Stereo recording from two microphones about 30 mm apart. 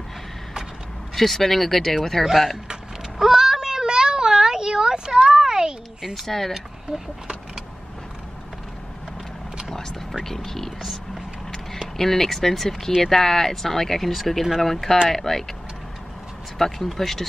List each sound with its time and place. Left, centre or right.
1.1 s speech: centre
3.2 s a sound: centre
6.2 s speech: centre
10.2 s speech: centre
12.0 s speech: centre
16.5 s speech: centre